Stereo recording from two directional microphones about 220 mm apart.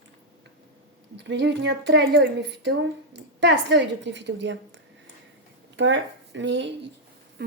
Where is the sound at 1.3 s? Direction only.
50° right (ahead or behind).